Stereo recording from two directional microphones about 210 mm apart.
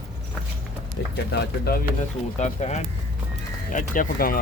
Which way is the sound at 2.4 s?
35° left (ahead or behind).